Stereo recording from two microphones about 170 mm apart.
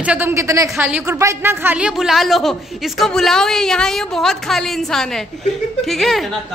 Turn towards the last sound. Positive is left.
turn(degrees=0)  # may be behind; listen again after turning